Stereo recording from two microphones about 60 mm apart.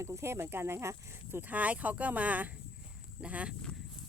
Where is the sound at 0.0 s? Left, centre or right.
Right.